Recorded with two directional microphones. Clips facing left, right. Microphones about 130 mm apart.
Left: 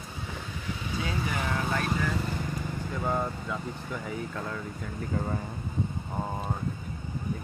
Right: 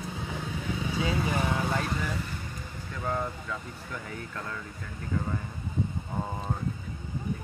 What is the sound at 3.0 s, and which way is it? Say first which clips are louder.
Vehicle: left 1 dB; 20° left (ahead or behind).